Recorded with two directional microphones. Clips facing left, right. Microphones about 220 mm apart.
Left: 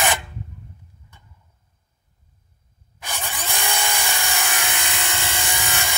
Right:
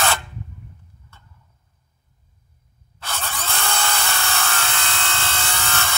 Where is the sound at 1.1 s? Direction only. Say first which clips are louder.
Right 2 dB; 15° left (ahead or behind).